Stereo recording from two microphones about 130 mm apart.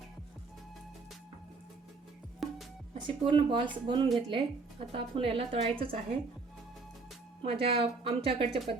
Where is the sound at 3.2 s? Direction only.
40° right (ahead or behind).